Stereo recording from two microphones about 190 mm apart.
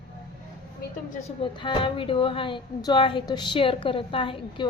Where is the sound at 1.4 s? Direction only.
25° left (ahead or behind).